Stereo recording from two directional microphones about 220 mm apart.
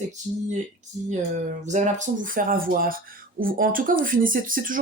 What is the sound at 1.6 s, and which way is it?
Speech, 35° right (ahead or behind).